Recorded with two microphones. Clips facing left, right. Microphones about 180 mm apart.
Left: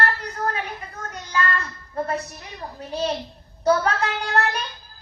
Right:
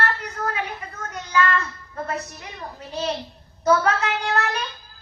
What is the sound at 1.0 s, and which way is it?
Child singing, 35° left (ahead or behind).